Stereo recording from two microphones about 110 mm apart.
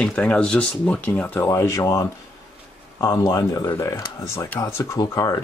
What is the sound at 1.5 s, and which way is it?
Speech, 30° left (ahead or behind).